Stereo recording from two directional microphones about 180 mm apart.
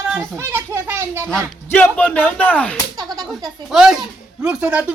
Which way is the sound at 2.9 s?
20° right (ahead or behind).